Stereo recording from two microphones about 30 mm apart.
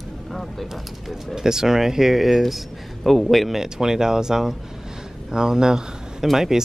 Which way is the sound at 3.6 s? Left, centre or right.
Centre.